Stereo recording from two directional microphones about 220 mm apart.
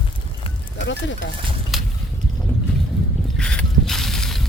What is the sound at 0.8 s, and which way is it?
Speech, 55° left (ahead or behind).